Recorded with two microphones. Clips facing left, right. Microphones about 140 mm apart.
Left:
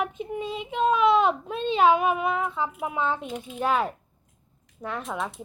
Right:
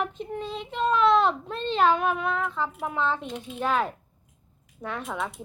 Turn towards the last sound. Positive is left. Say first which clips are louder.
# left 1 dB
turn(degrees=0)  # may be behind; listen again after turning